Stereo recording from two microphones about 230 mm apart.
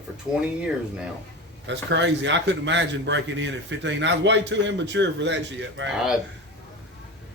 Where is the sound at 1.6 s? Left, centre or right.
Right.